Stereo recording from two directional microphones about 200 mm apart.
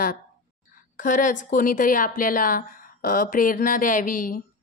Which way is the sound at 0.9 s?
40° left (ahead or behind).